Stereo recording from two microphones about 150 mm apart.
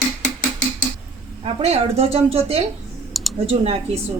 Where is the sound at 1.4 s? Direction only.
45° right (ahead or behind).